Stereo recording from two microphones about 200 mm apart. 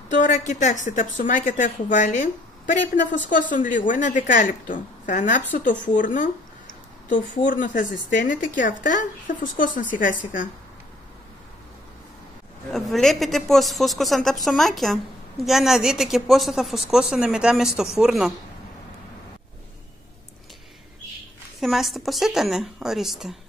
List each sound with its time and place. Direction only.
0.1 s speech: 40° left (ahead or behind)
12.7 s a woman's voice: centre (ahead or behind)
21.5 s a woman's voice: centre (ahead or behind)